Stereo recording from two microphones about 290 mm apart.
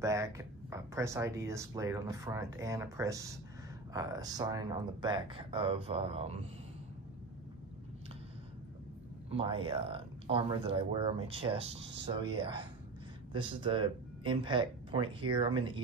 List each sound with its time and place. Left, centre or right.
0.0 s speech: centre
9.3 s speech: centre